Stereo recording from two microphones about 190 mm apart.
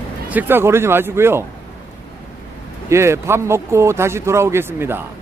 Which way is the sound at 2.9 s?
15° right (ahead or behind).